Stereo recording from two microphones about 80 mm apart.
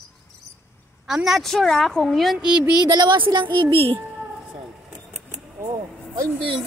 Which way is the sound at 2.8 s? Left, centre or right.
Right.